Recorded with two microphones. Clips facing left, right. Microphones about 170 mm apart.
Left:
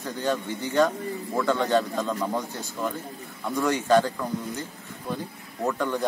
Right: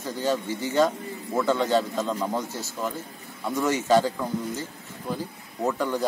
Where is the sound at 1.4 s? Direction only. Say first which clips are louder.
Even; 20° right (ahead or behind).